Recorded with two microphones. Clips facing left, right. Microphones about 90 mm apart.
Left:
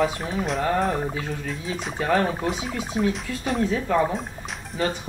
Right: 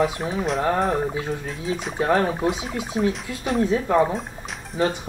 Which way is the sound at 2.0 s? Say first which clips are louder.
Right 2 dB; 25° right (ahead or behind).